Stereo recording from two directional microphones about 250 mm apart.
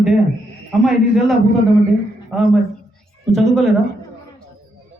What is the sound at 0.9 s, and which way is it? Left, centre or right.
A man's voice, centre.